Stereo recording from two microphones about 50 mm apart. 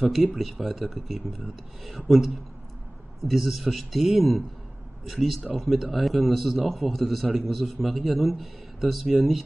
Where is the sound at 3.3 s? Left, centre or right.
Centre.